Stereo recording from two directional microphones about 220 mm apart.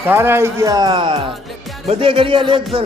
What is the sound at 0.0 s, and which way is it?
A man's voice, 10° right (ahead or behind).